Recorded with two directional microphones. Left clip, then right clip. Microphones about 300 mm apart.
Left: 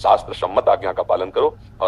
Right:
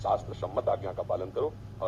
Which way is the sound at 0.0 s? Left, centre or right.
Left.